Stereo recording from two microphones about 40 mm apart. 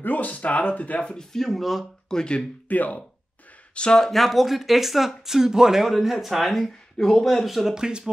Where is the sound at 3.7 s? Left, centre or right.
Left.